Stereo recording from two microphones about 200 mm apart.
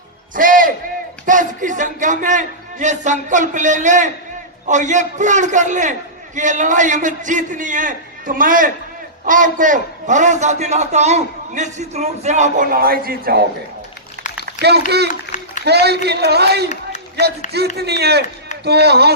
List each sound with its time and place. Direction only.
0.3 s music: 45° right (ahead or behind)
1.2 s a man's voice: 40° right (ahead or behind)
14.4 s a child's voice: 55° right (ahead or behind)
17.7 s a man's voice: 55° right (ahead or behind)